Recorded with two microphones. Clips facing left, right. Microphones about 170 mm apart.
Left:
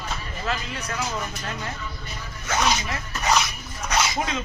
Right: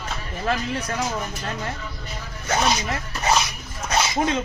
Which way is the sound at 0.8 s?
30° right (ahead or behind).